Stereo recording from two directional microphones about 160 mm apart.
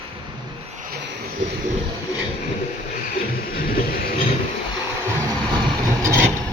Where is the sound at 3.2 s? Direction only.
65° left (ahead or behind).